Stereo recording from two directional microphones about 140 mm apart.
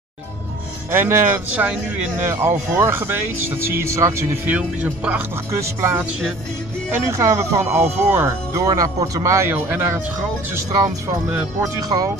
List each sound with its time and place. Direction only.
0.9 s speech: 15° right (ahead or behind)
4.5 s speech: 10° right (ahead or behind); by 12.1 s 25° right (ahead or behind)